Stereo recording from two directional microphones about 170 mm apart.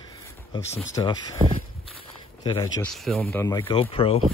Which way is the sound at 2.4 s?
25° left (ahead or behind).